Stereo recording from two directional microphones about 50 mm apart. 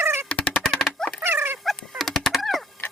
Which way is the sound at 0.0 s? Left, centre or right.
Right.